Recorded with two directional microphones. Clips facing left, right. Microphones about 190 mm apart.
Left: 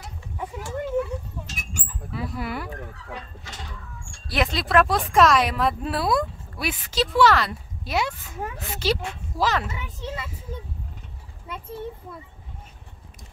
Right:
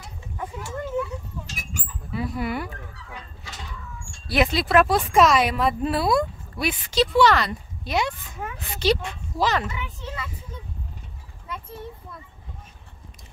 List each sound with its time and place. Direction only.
0.0 s a sound: 5° left (ahead or behind)
2.1 s speech: centre (ahead or behind)
4.3 s speech: centre (ahead or behind)
9.7 s a child's voice: 40° left (ahead or behind)